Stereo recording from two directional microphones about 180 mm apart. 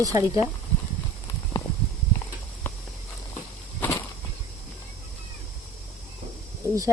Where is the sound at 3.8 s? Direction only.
15° left (ahead or behind).